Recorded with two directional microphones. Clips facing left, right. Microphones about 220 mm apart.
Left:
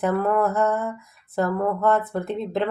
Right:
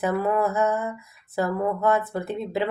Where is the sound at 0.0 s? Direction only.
5° right (ahead or behind).